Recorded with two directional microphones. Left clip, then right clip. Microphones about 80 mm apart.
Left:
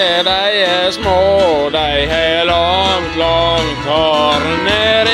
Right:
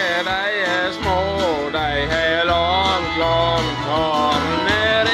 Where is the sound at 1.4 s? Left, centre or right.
Centre.